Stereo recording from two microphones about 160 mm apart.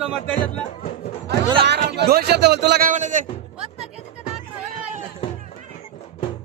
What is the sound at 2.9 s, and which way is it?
Speech, 50° right (ahead or behind).